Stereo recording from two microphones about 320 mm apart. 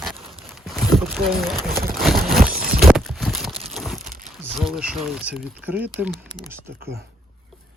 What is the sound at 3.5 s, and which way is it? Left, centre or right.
Crumpling, centre.